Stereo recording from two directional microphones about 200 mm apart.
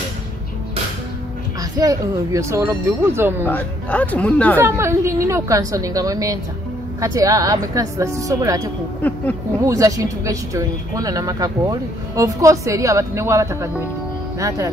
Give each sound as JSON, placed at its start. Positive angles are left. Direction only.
{"t": 1.6, "sound": "speech", "side_deg": -15}
{"t": 3.4, "sound": "speech", "side_deg": 10}
{"t": 4.6, "sound": "speech", "side_deg": -15}
{"t": 9.7, "sound": "speech", "side_deg": -15}